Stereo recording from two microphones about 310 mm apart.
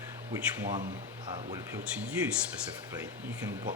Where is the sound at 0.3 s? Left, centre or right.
Centre.